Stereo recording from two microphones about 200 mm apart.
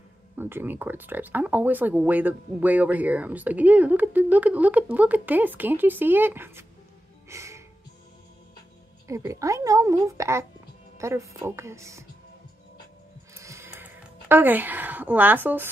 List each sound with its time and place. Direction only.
0.4 s speech: 10° right (ahead or behind)
7.2 s music: 15° right (ahead or behind)
9.0 s speech: 15° right (ahead or behind)
13.3 s a sound: 15° right (ahead or behind)